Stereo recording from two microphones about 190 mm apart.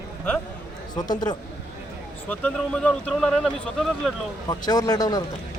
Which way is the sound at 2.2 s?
10° left (ahead or behind).